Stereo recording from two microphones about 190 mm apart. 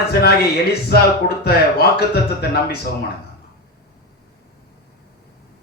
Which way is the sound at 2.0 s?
55° left (ahead or behind).